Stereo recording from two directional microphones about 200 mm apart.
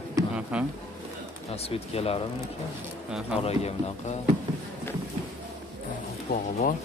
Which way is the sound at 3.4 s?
30° left (ahead or behind).